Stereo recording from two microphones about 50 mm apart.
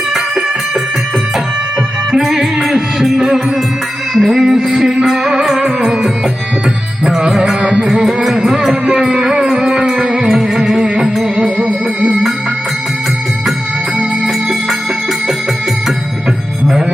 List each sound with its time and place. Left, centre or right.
2.1 s music: centre